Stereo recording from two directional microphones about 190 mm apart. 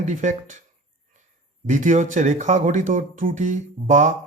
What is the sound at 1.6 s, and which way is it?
Speech, 40° right (ahead or behind).